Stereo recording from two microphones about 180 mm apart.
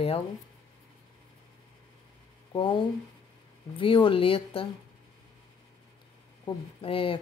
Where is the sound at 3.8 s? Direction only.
30° left (ahead or behind).